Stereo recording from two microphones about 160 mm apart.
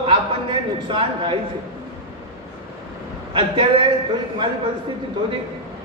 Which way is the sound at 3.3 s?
30° right (ahead or behind).